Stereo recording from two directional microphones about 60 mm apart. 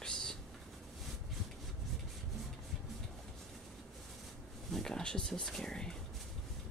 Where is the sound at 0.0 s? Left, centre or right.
Centre.